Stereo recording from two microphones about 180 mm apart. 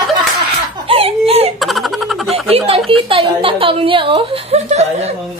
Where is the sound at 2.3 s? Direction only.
30° right (ahead or behind).